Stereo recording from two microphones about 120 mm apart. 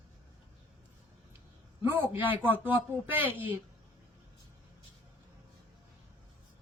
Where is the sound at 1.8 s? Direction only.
45° left (ahead or behind).